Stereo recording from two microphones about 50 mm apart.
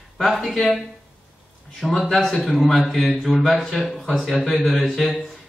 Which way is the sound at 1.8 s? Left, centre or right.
Centre.